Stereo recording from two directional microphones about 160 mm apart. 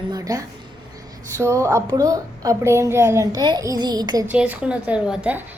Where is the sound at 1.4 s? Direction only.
20° right (ahead or behind).